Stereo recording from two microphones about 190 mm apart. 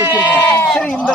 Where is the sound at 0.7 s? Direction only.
5° left (ahead or behind).